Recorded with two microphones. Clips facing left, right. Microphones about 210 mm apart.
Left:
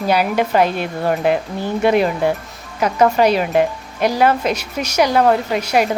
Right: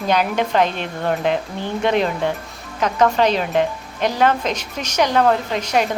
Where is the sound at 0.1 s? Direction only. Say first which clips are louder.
Left 2 dB; 10° left (ahead or behind).